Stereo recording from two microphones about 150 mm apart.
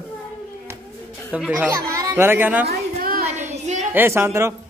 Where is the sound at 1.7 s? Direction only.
25° right (ahead or behind).